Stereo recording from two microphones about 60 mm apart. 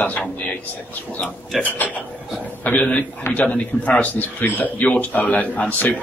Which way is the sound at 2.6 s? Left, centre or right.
Left.